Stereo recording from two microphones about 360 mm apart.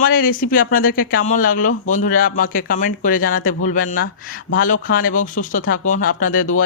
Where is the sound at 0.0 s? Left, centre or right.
Left.